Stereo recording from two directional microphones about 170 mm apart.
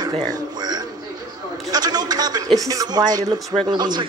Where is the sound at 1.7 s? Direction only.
25° right (ahead or behind).